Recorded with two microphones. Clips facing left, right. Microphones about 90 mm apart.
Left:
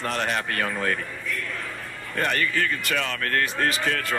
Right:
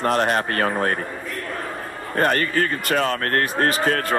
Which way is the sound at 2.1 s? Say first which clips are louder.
Right 5 dB; 40° right (ahead or behind).